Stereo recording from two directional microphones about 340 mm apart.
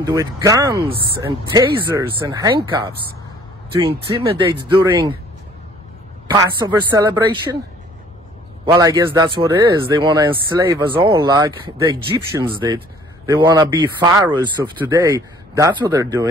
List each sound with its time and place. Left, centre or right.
0.0 s speech: centre
6.2 s speech: centre
8.6 s speech: centre